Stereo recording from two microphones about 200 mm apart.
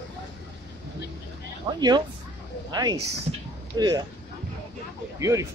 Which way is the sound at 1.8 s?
20° right (ahead or behind).